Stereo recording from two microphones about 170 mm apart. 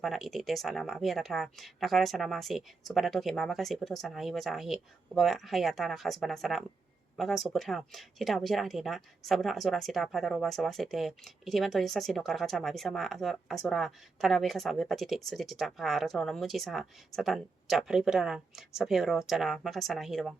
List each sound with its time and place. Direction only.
0.0 s speech: centre (ahead or behind)